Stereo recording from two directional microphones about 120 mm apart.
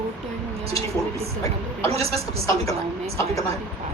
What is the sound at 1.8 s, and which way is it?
Speech, 55° right (ahead or behind).